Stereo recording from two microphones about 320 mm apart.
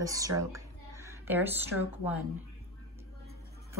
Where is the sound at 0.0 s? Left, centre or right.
Centre.